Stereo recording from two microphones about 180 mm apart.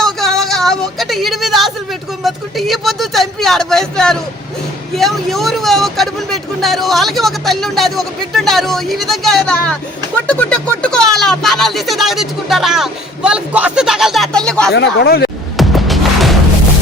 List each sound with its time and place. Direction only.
0.0 s a sound: centre (ahead or behind)
4.9 s speech: centre (ahead or behind)
14.7 s speech: 70° left (ahead or behind)
15.5 s music: centre (ahead or behind)